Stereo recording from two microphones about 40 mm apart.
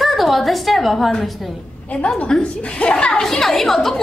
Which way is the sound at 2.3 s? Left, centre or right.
Centre.